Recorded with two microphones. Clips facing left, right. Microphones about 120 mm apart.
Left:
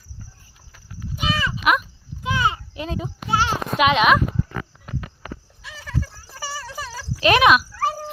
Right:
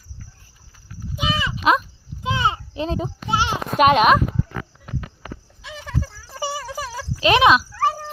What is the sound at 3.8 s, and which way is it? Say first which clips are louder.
Speech: right 3 dB; 45° right (ahead or behind).